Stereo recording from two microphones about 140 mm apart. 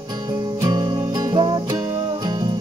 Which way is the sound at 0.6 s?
30° right (ahead or behind).